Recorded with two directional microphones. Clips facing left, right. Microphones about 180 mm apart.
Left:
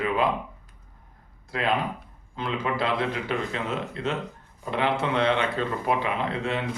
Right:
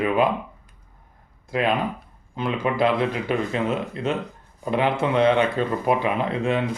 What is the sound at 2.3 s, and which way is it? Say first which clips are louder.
Speech: right 5 dB; 15° right (ahead or behind).